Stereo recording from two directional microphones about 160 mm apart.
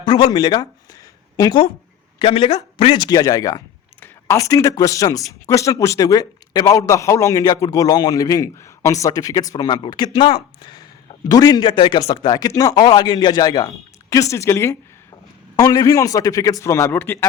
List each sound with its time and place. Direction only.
0.0 s a man's voice: 30° left (ahead or behind); by 17.2 s 10° left (ahead or behind)